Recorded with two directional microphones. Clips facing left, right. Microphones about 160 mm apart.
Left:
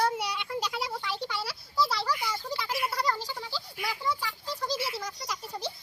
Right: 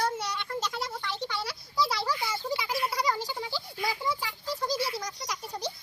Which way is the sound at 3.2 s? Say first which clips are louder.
Right 3 dB; 15° right (ahead or behind).